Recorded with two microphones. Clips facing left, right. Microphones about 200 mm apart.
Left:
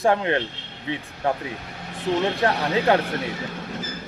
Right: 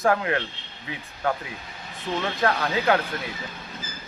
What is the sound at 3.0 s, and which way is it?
Speech, 75° left (ahead or behind).